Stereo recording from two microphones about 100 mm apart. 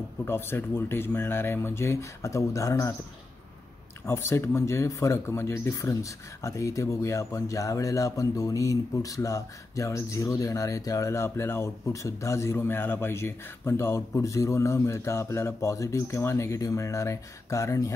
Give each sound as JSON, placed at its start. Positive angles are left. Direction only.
{"t": 0.2, "sound": "speech", "side_deg": 25}
{"t": 4.0, "sound": "speech", "side_deg": 25}